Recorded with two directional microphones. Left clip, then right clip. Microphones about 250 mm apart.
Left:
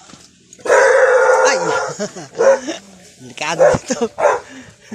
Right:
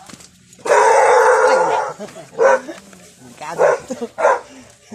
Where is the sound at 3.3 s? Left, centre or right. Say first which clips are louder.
Left 3 dB; left.